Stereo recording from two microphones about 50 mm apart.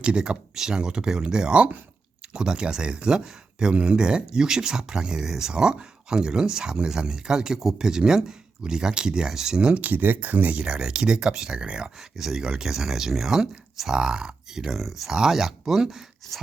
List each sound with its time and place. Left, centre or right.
0.0 s speech: centre
9.6 s speech: right
9.9 s speech: right
10.6 s speech: centre
11.9 s speech: centre